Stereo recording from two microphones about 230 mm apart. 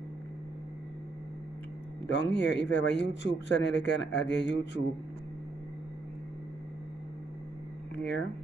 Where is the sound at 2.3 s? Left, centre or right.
Left.